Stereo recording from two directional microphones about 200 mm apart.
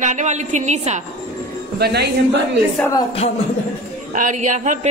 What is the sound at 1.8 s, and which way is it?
Speech, 55° right (ahead or behind).